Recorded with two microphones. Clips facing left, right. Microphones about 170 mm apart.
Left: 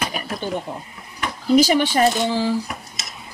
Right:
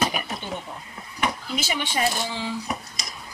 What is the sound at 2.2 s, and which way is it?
Speech, 35° left (ahead or behind).